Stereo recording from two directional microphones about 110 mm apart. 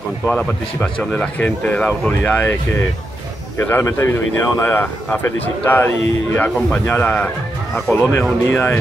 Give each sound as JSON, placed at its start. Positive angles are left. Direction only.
{"t": 0.3, "sound": "speech", "side_deg": 10}